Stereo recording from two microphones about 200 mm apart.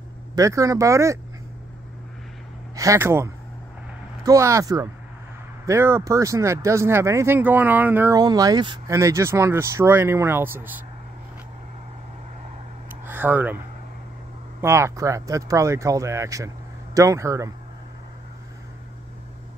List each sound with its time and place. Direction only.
0.4 s speech: 15° right (ahead or behind)
2.7 s speech: 15° right (ahead or behind)
13.0 s speech: 10° right (ahead or behind)
14.6 s speech: 15° right (ahead or behind)